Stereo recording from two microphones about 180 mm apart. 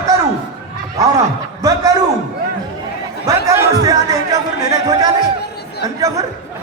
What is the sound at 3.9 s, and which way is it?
A man's voice, 20° right (ahead or behind).